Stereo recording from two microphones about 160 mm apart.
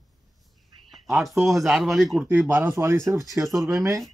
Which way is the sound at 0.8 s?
Centre (ahead or behind).